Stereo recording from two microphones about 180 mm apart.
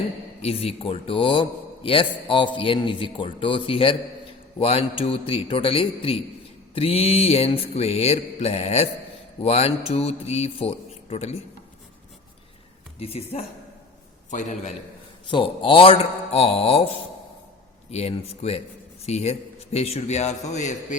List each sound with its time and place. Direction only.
0.4 s a man's voice: 35° left (ahead or behind)
4.6 s music: 30° left (ahead or behind)
13.0 s music: 35° left (ahead or behind)
14.3 s a man's voice: 45° left (ahead or behind)
15.3 s music: 30° left (ahead or behind)
17.9 s music: 35° left (ahead or behind)